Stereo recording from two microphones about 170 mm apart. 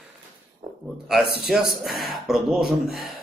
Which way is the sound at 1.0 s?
Centre (ahead or behind).